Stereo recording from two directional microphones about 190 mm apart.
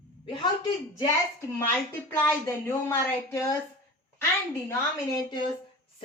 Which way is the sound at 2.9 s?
15° left (ahead or behind).